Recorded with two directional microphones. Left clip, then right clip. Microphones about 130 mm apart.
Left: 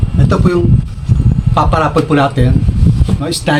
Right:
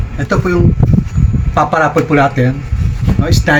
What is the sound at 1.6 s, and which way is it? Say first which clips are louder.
Speech: right 1 dB; 25° left (ahead or behind).